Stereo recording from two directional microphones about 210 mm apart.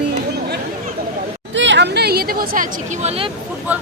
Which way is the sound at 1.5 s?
60° right (ahead or behind).